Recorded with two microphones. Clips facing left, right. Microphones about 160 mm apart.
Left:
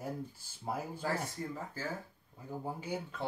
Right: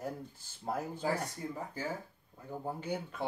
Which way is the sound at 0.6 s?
10° left (ahead or behind).